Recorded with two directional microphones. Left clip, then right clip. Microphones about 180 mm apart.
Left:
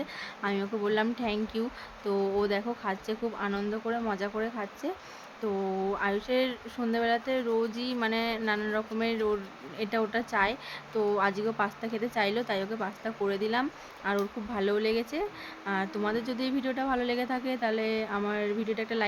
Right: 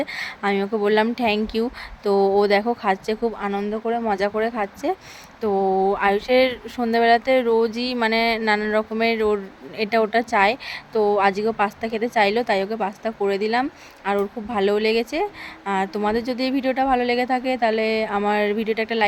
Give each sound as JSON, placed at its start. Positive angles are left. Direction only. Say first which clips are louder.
{"t": 0.0, "sound": "speech", "louder": "right 10 dB", "side_deg": -40}